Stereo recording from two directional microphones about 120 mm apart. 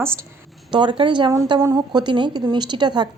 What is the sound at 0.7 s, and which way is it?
A woman's voice, 45° right (ahead or behind).